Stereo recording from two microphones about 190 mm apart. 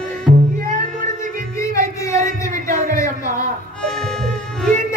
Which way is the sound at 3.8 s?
5° left (ahead or behind).